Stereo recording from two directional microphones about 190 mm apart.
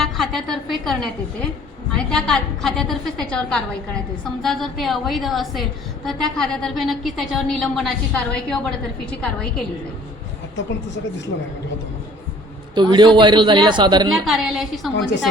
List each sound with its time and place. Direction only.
0.0 s a woman's voice: centre (ahead or behind)
12.7 s a man's voice: 25° right (ahead or behind)
14.3 s a woman's voice: centre (ahead or behind)
14.9 s a woman's voice: 70° left (ahead or behind)